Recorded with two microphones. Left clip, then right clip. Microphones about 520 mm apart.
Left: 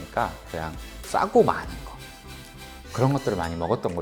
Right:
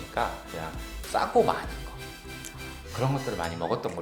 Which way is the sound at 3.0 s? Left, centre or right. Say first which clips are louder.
Left 5 dB; left.